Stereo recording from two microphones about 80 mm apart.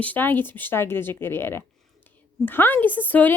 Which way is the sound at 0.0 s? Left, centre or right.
Left.